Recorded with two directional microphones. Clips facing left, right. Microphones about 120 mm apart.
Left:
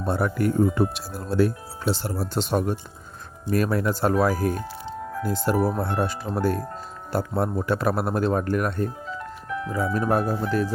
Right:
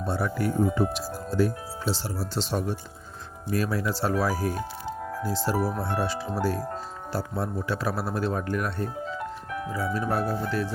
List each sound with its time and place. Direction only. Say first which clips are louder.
0.0 s speech: left 4 dB; 55° left (ahead or behind)